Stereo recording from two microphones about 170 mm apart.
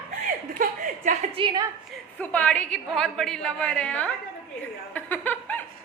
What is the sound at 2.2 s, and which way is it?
A woman's voice, 10° left (ahead or behind).